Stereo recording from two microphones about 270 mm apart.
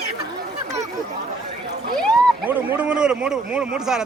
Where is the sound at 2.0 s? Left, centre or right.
Centre.